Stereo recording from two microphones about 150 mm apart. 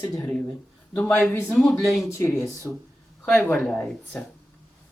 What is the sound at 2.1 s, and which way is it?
Speech, 20° left (ahead or behind).